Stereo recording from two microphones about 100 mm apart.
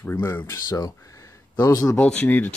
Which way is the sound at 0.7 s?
35° left (ahead or behind).